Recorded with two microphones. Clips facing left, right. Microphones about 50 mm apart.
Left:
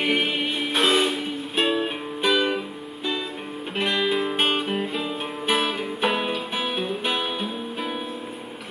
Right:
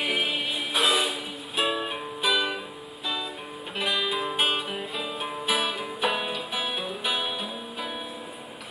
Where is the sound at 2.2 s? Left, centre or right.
Centre.